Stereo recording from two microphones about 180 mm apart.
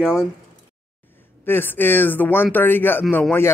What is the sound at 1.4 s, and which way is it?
Speech, 10° left (ahead or behind).